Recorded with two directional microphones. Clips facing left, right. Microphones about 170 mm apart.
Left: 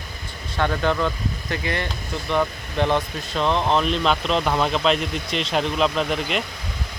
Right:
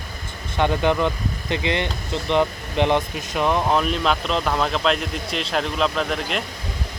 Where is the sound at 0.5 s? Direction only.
15° right (ahead or behind).